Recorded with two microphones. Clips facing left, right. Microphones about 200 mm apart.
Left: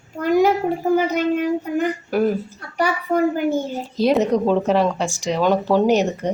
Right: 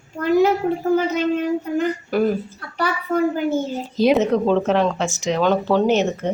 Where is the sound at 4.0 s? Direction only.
Centre (ahead or behind).